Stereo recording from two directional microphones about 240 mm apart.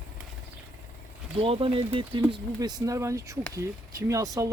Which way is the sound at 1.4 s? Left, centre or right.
Right.